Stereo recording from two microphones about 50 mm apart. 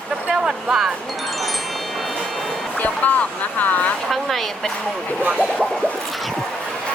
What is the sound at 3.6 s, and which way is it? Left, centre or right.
Speech, left.